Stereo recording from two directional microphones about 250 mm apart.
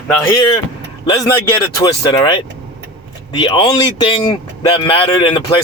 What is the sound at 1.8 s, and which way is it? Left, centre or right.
Speech, centre.